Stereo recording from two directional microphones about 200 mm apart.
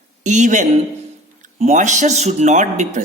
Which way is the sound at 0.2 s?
40° right (ahead or behind).